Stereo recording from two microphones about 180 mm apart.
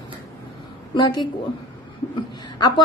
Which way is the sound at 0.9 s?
25° left (ahead or behind).